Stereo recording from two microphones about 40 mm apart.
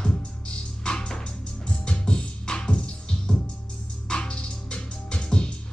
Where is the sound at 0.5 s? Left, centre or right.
Left.